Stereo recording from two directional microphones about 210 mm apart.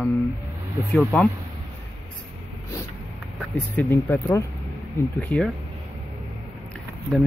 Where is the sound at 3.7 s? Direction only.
10° left (ahead or behind).